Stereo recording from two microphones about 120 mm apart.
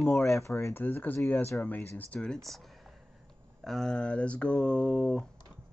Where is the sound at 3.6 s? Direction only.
5° left (ahead or behind).